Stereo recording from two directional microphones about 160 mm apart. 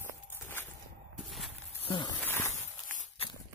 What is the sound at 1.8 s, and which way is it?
Insect, 30° left (ahead or behind).